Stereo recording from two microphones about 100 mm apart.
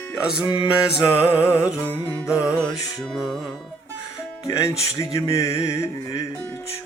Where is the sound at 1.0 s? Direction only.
25° left (ahead or behind).